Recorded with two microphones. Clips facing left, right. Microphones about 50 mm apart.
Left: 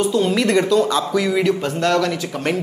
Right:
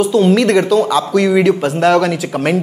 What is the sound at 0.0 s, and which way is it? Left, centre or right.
A woman's voice, centre.